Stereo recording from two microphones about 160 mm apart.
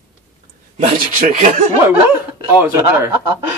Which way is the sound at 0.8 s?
50° right (ahead or behind).